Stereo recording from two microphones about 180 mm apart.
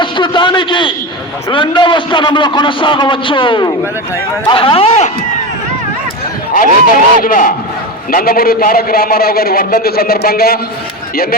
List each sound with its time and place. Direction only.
0.0 s a man's voice: 25° left (ahead or behind)
6.5 s a man's voice: 50° left (ahead or behind)